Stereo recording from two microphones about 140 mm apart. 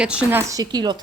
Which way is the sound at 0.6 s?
30° right (ahead or behind).